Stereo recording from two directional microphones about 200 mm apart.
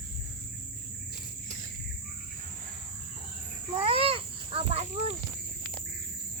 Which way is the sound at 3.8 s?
25° right (ahead or behind).